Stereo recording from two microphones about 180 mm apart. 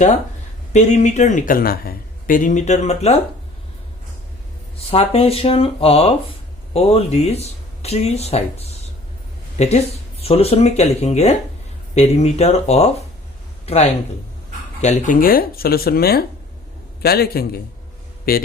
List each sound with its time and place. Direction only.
0.7 s speech: 40° left (ahead or behind)
4.9 s speech: 35° left (ahead or behind); by 18.4 s 55° left (ahead or behind)